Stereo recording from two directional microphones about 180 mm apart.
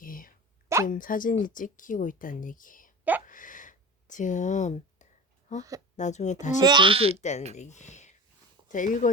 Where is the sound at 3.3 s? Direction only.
45° left (ahead or behind).